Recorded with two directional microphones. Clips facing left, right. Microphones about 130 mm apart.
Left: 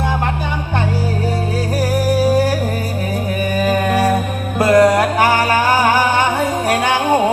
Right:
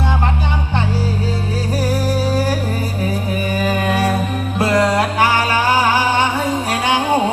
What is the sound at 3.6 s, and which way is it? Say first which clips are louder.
Humming: left 3 dB; 45° left (ahead or behind).